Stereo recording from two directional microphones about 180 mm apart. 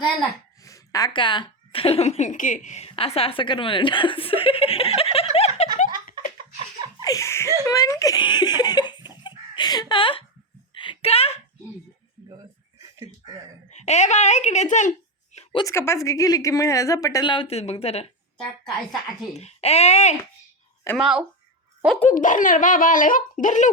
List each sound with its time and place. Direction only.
0.6 s a woman's voice: 20° left (ahead or behind)
5.5 s giggle: 45° left (ahead or behind)
7.0 s laughter: 20° left (ahead or behind)
7.6 s giggle: 20° left (ahead or behind)
10.8 s a sound: 30° left (ahead or behind)
12.8 s a sound: 20° right (ahead or behind)
13.7 s speech: 40° left (ahead or behind)
15.5 s a woman's voice: 15° left (ahead or behind); by 20.1 s 35° left (ahead or behind)
21.0 s speech: 5° right (ahead or behind)
22.1 s speech: 45° left (ahead or behind)